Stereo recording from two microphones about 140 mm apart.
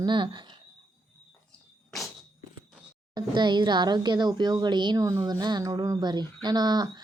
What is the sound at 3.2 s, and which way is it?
Speech, 35° right (ahead or behind).